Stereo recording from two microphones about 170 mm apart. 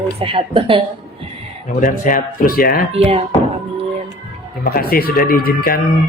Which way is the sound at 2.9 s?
35° right (ahead or behind).